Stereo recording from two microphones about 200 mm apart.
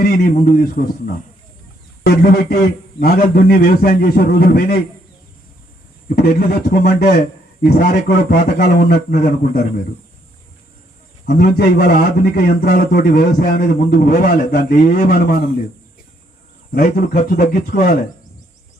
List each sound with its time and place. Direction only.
0.0 s a man's voice: 45° left (ahead or behind)
6.1 s a man's voice: 50° left (ahead or behind)
11.3 s a man's voice: 50° left (ahead or behind)
16.7 s a man's voice: 50° left (ahead or behind)